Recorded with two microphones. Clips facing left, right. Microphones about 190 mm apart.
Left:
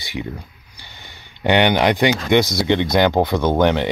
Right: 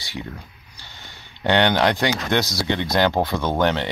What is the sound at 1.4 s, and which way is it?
Speech, 15° left (ahead or behind).